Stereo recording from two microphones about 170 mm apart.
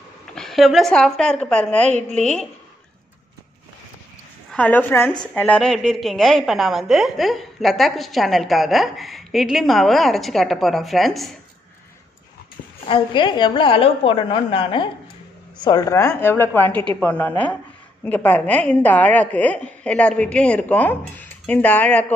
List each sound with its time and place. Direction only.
0.3 s a woman's voice: centre (ahead or behind)
4.5 s a woman's voice: 10° left (ahead or behind)
12.8 s a woman's voice: 30° left (ahead or behind); by 22.0 s 10° left (ahead or behind)